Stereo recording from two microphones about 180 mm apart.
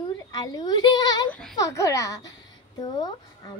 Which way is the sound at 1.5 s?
15° left (ahead or behind).